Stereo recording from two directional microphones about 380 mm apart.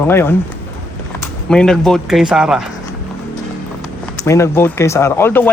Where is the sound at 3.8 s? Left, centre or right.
Centre.